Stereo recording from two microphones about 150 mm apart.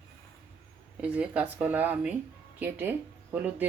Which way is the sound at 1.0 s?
10° right (ahead or behind).